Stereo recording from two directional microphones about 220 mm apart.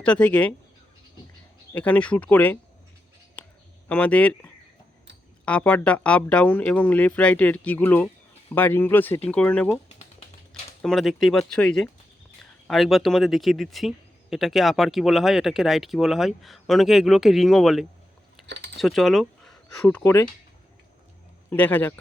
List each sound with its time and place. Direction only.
0.0 s speech: 5° left (ahead or behind)
1.7 s speech: 5° left (ahead or behind)
3.4 s a sound: 5° left (ahead or behind)
3.8 s speech: 5° left (ahead or behind)
5.5 s speech: 5° left (ahead or behind)
10.8 s speech: centre (ahead or behind)
18.4 s typing: 50° right (ahead or behind)
18.8 s speech: centre (ahead or behind)
21.5 s speech: 10° left (ahead or behind)